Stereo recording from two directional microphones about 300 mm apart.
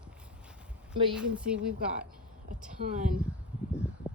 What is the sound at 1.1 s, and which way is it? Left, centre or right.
Speech, centre.